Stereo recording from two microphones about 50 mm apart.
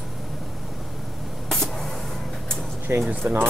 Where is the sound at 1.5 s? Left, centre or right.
Centre.